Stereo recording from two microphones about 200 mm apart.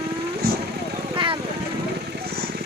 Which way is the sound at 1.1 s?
25° right (ahead or behind).